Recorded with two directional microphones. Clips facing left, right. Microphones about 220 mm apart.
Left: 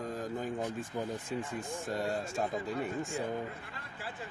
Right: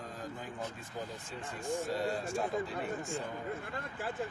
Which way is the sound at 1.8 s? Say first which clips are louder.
Left 3 dB; 50° left (ahead or behind).